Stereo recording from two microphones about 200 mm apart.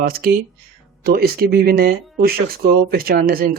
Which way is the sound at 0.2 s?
50° right (ahead or behind).